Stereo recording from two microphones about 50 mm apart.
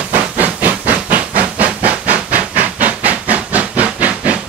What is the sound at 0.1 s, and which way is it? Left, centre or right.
Steam, right.